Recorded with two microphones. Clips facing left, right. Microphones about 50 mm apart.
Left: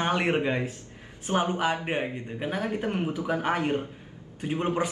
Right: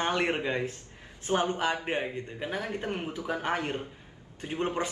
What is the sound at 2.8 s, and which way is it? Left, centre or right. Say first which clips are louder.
Speech: left 5 dB; left.